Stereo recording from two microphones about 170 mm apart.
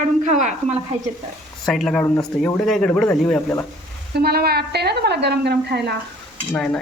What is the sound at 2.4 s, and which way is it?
Speech, 5° left (ahead or behind).